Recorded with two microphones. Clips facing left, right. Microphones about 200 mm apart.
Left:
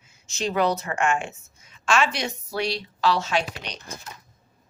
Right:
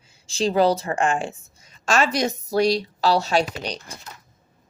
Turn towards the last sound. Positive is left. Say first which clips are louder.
# right 5 dB
turn(degrees=-35)  # may be behind; listen again after turning